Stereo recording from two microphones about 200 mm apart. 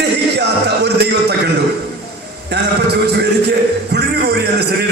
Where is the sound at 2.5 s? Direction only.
55° right (ahead or behind).